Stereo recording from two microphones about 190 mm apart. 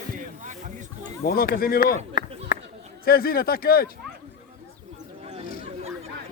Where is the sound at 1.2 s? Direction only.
55° left (ahead or behind).